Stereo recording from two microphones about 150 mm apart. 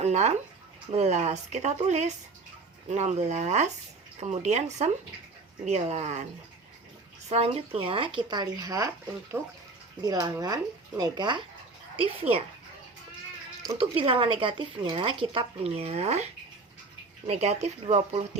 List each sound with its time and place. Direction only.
0.0 s a sound: 50° right (ahead or behind)
0.9 s speech: 45° right (ahead or behind)
7.3 s a woman's voice: 45° right (ahead or behind); by 8.9 s 25° right (ahead or behind)
9.3 s speech: 10° right (ahead or behind)
10.0 s speech: 25° right (ahead or behind)
13.7 s a woman's voice: 35° right (ahead or behind)
17.2 s speech: 45° right (ahead or behind)